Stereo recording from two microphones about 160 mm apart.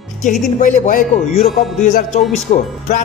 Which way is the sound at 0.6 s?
55° left (ahead or behind).